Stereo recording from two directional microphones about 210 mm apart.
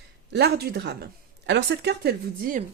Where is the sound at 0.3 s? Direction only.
50° right (ahead or behind).